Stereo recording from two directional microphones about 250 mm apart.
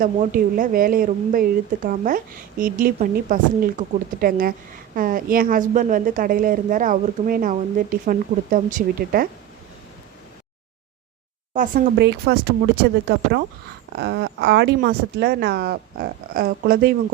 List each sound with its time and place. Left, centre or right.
0.0 s a woman's voice: right
11.5 s a woman's voice: right